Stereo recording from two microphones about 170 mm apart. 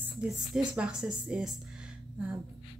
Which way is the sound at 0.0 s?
5° right (ahead or behind).